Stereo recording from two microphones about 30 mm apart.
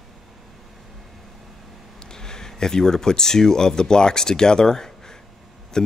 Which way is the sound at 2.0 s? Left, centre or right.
Left.